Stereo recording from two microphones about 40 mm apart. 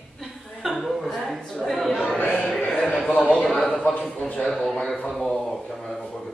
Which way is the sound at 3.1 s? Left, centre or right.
Left.